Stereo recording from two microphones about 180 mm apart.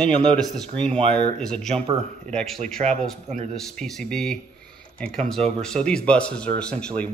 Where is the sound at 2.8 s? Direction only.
40° right (ahead or behind).